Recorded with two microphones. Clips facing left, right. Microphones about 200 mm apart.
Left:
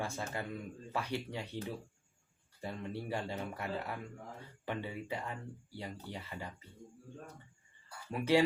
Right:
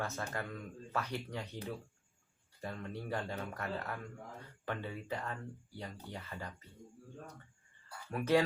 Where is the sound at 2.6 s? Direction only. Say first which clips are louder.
Left 2 dB; 15° left (ahead or behind).